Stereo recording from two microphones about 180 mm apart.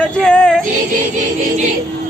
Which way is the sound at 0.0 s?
5° left (ahead or behind).